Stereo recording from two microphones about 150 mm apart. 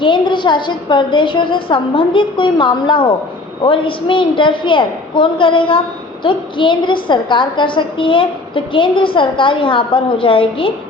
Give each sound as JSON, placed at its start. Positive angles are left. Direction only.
{"t": 0.0, "sound": "a woman's voice", "side_deg": 30}